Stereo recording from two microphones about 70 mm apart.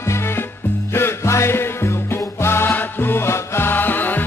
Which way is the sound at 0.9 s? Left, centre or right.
Left.